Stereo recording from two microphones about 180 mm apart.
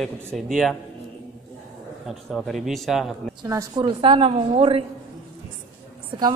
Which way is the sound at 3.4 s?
20° right (ahead or behind).